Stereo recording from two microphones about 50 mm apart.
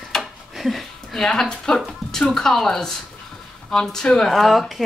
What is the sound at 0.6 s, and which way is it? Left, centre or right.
A woman's voice, centre.